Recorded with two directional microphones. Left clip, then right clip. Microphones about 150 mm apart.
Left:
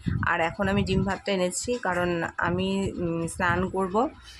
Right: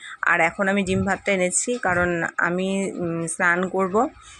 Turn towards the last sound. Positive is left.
turn(degrees=-20)  # may be behind; listen again after turning